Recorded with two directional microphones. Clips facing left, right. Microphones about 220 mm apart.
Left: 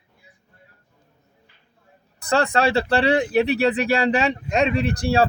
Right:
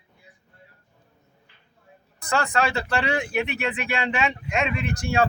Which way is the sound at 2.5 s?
35° left (ahead or behind).